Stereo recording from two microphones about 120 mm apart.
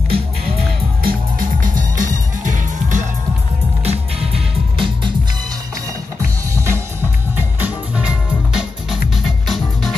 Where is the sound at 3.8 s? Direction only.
55° right (ahead or behind).